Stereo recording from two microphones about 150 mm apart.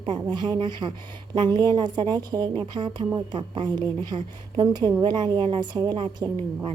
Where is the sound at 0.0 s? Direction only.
30° right (ahead or behind).